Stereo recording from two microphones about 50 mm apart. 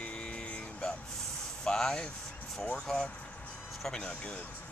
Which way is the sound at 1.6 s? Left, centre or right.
Centre.